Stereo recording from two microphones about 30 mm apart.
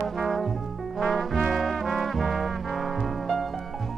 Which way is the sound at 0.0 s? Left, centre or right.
Centre.